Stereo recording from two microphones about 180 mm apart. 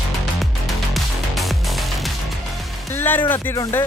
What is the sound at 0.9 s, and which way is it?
Music, centre (ahead or behind).